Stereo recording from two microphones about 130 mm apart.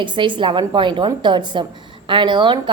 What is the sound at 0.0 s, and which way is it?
A woman's voice, 35° right (ahead or behind).